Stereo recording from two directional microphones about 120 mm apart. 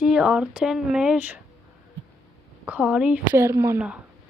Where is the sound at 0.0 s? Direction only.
5° right (ahead or behind).